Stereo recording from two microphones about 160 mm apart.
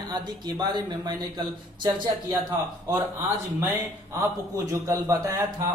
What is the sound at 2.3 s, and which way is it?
Speech, 20° right (ahead or behind).